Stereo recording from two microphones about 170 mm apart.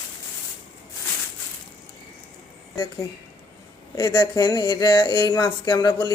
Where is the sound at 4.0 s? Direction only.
20° left (ahead or behind).